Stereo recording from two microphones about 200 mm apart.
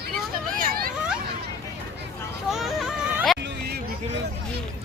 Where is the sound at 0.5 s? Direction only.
45° right (ahead or behind).